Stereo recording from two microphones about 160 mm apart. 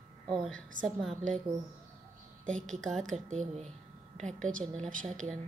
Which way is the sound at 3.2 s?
50° right (ahead or behind).